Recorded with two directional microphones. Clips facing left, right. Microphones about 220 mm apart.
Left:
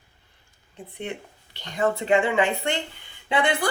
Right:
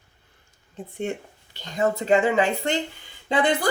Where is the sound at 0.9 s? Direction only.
45° right (ahead or behind).